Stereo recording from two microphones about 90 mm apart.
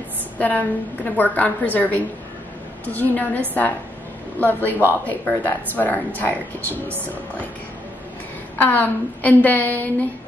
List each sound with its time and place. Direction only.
0.4 s a woman's voice: 20° left (ahead or behind)
4.4 s speech: 20° left (ahead or behind)
8.5 s speech: 20° left (ahead or behind)